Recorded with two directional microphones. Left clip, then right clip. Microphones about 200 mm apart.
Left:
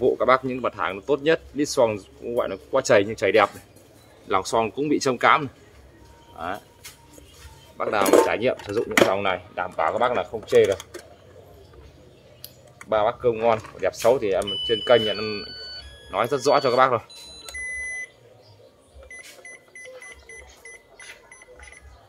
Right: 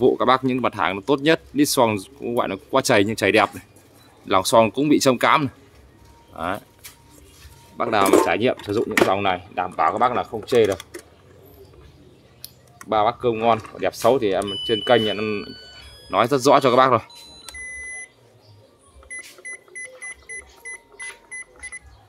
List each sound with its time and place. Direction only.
0.0 s speech: 55° right (ahead or behind)
7.7 s speech: 50° right (ahead or behind)
12.9 s speech: 40° right (ahead or behind)
20.6 s cash register: centre (ahead or behind)